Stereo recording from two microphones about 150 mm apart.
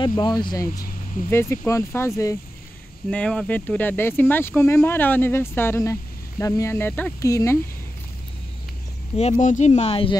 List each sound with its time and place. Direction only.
0.0 s speech: 30° left (ahead or behind)
1.3 s speech: 15° left (ahead or behind)
3.1 s speech: 5° left (ahead or behind)
7.2 s speech: 20° left (ahead or behind)
9.1 s speech: 50° left (ahead or behind)